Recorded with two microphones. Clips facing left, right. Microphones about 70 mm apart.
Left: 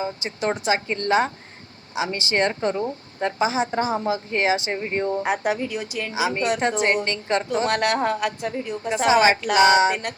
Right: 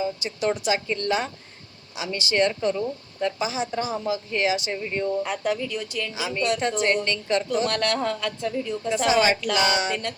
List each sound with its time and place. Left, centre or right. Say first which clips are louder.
0.0 s speech: even; left
5.2 s a woman's voice: left 3 dB; left
6.1 s speech: left 3 dB; left